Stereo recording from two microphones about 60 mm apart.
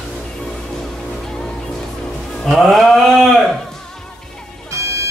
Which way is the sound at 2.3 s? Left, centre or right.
Centre.